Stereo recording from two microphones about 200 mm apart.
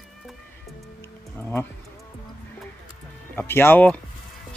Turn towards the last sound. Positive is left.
turn(degrees=10)  # may be behind; listen again after turning